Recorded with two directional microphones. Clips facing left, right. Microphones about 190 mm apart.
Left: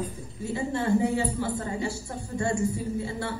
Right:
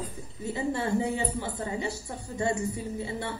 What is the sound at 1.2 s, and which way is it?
Speech, 20° right (ahead or behind).